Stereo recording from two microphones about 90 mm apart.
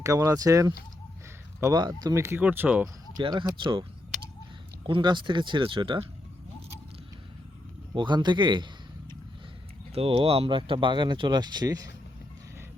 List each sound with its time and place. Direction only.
0.0 s speech: 35° right (ahead or behind)
2.4 s speech: 20° right (ahead or behind)
3.2 s speech: 55° right (ahead or behind)
4.9 s speech: 60° right (ahead or behind)
7.9 s speech: 55° right (ahead or behind)
9.9 s speech: 90° right; by 11.9 s 45° right (ahead or behind)